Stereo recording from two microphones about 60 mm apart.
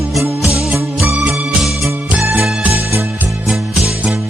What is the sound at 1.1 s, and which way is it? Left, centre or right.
Music, centre.